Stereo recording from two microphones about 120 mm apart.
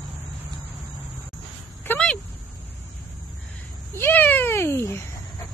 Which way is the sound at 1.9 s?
10° left (ahead or behind).